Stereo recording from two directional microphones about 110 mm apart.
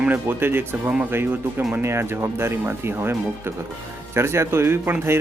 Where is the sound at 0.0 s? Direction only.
15° right (ahead or behind).